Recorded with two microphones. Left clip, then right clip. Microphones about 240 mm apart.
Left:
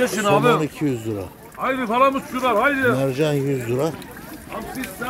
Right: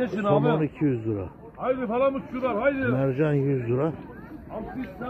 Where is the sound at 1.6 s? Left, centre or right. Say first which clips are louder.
Left 6 dB; right.